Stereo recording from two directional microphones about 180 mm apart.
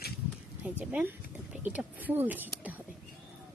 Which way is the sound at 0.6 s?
10° right (ahead or behind).